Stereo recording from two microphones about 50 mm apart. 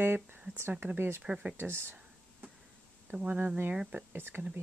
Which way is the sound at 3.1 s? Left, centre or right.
Right.